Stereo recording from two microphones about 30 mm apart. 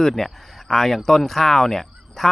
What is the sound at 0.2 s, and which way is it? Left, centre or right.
Speech, centre.